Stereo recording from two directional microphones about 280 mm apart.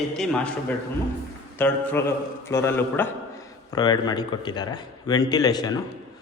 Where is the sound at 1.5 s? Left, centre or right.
Centre.